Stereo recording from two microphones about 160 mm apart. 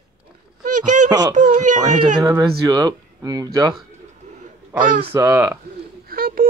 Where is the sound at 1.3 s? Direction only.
50° right (ahead or behind).